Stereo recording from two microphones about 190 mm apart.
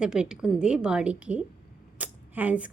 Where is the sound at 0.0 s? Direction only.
5° right (ahead or behind).